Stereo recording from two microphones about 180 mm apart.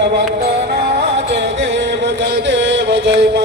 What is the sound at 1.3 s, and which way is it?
Music, 75° right (ahead or behind).